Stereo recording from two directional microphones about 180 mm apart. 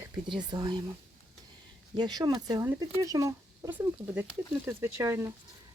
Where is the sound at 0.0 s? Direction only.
25° right (ahead or behind).